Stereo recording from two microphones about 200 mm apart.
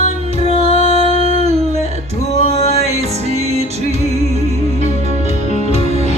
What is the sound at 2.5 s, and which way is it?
Music, 35° left (ahead or behind).